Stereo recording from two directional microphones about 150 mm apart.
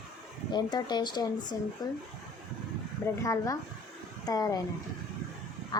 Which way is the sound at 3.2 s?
25° left (ahead or behind).